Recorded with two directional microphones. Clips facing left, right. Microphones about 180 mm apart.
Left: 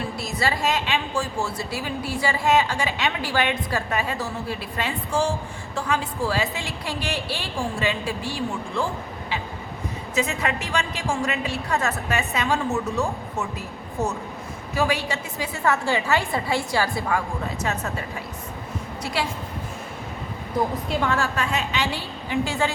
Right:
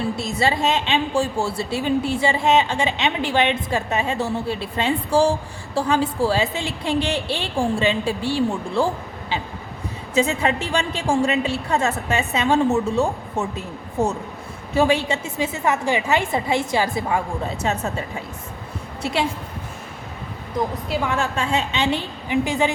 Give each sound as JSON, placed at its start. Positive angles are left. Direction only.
{"t": 0.2, "sound": "a woman's voice", "side_deg": -25}
{"t": 10.2, "sound": "a woman's voice", "side_deg": -30}
{"t": 19.0, "sound": "a woman's voice", "side_deg": -25}
{"t": 21.0, "sound": "a woman's voice", "side_deg": -20}